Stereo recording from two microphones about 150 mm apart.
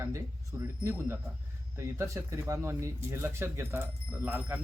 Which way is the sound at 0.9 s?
15° right (ahead or behind).